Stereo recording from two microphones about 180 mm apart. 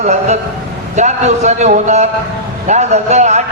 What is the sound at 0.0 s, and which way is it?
A man's voice, 40° right (ahead or behind).